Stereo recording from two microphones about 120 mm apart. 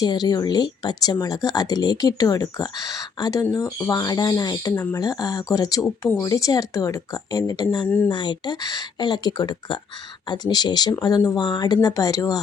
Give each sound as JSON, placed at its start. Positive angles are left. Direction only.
{"t": 0.0, "sound": "a woman's voice", "side_deg": 35}
{"t": 4.7, "sound": "a woman's voice", "side_deg": 20}
{"t": 4.9, "sound": "a woman's voice", "side_deg": 30}
{"t": 7.9, "sound": "speech", "side_deg": 15}
{"t": 8.1, "sound": "speech", "side_deg": 40}